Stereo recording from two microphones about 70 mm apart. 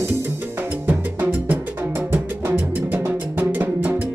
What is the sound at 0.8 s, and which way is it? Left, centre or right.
Music, right.